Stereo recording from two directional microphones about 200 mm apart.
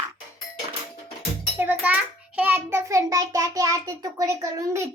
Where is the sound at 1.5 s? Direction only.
10° right (ahead or behind).